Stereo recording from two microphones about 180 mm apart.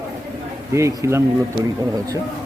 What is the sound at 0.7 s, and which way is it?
Speech, 15° right (ahead or behind).